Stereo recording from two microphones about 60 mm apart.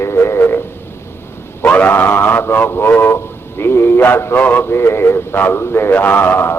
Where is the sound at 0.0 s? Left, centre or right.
Left.